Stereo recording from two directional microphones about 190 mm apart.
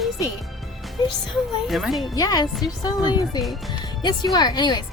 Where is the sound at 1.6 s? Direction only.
Centre (ahead or behind).